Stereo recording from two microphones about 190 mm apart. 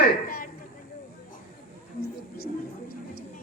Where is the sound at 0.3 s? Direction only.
50° left (ahead or behind).